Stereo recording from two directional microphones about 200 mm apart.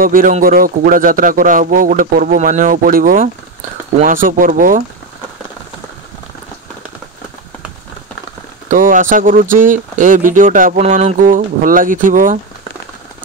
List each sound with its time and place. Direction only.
0.0 s speech: 45° right (ahead or behind)
8.6 s speech: 40° right (ahead or behind)